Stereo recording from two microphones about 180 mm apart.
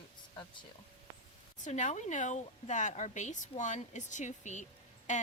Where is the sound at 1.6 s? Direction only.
40° left (ahead or behind).